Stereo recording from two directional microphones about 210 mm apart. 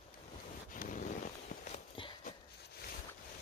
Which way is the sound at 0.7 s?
40° left (ahead or behind).